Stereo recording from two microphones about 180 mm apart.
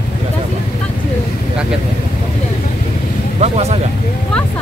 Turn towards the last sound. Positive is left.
turn(degrees=-35)  # may be behind; listen again after turning